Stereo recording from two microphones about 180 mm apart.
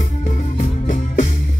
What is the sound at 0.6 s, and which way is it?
Music, 45° left (ahead or behind).